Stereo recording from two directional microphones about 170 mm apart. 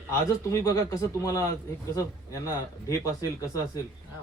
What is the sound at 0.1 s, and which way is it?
A man's voice, 15° left (ahead or behind).